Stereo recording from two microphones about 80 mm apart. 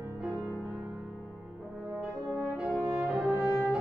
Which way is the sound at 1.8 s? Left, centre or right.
Centre.